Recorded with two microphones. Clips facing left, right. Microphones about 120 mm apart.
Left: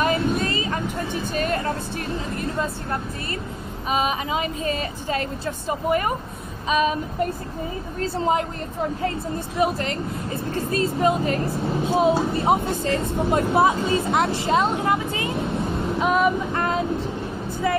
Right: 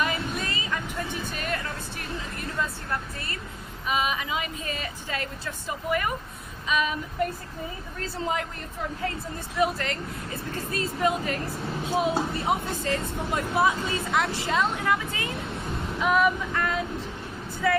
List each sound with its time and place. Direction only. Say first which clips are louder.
0.0 s vehicle: left 7 dB; 40° left (ahead or behind)
1.3 s music: left 8 dB; 35° left (ahead or behind)
3.9 s speech: left 4 dB; 35° left (ahead or behind)
9.6 s speech: left 3 dB; 25° left (ahead or behind)